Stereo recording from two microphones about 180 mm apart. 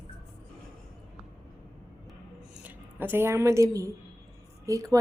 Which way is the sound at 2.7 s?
10° right (ahead or behind).